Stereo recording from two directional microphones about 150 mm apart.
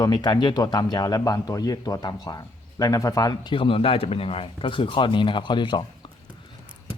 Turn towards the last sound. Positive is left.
turn(degrees=30)  # may be behind; listen again after turning